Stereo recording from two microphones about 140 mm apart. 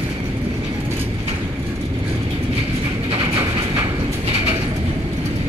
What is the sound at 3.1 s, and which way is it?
Train, 40° right (ahead or behind).